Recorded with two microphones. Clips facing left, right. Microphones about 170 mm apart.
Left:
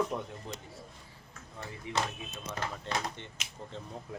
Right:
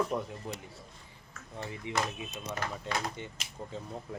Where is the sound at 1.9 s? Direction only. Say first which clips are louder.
Even; 20° right (ahead or behind).